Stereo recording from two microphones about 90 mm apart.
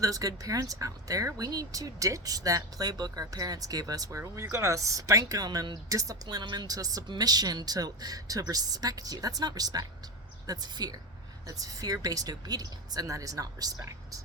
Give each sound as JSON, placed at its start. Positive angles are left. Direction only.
{"t": 0.0, "sound": "speech", "side_deg": -40}
{"t": 6.2, "sound": "speech", "side_deg": -55}